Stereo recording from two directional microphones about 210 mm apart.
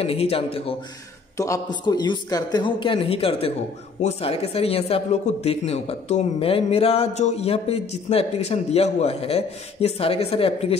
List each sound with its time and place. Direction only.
0.0 s a man's voice: 30° left (ahead or behind)
1.3 s a man's voice: 15° left (ahead or behind)